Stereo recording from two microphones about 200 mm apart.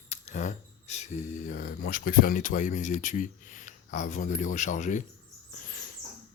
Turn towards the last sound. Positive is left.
turn(degrees=45)  # may be behind; listen again after turning